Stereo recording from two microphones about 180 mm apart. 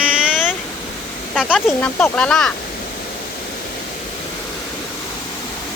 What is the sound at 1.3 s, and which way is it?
Speech, 5° right (ahead or behind).